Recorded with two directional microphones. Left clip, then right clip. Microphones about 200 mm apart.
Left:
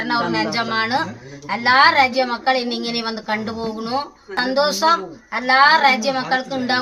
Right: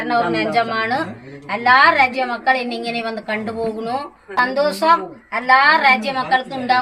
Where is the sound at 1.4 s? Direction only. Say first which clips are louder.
Right 1 dB; 80° left.